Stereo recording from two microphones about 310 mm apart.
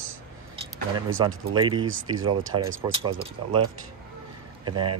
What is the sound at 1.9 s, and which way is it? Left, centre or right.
Speech, right.